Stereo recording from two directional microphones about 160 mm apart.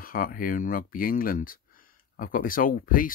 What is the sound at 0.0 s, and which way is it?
Speech, 65° left (ahead or behind).